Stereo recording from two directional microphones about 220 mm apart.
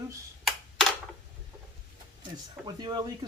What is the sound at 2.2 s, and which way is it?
Speech, 20° right (ahead or behind).